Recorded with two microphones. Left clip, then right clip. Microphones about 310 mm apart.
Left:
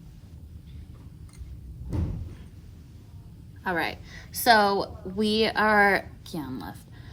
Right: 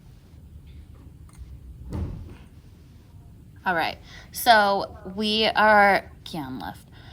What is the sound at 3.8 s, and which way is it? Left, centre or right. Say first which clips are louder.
A woman's voice: right 3 dB; centre.